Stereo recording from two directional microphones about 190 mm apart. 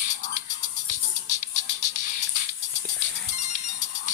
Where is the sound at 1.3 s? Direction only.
40° left (ahead or behind).